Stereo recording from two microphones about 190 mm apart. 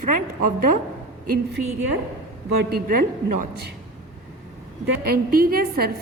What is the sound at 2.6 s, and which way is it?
A woman's voice, 50° right (ahead or behind).